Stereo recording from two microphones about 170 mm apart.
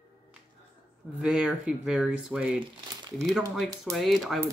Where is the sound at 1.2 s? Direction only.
5° right (ahead or behind).